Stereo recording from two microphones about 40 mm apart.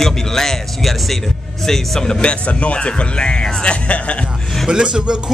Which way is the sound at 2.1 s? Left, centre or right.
Left.